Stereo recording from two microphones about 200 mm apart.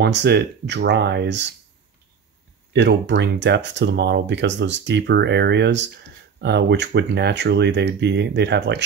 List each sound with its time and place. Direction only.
0.0 s speech: 60° right (ahead or behind)
2.7 s speech: 60° right (ahead or behind)